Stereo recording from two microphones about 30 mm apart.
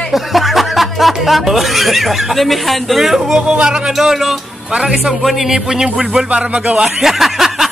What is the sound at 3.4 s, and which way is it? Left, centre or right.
Speech, right.